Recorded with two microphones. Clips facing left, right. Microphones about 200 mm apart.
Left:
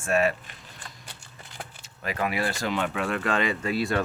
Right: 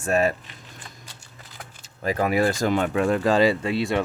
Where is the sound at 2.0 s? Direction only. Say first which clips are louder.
Right 7 dB; 40° right (ahead or behind).